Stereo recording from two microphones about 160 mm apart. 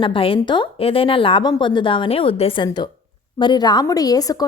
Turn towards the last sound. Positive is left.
turn(degrees=25)  # may be behind; listen again after turning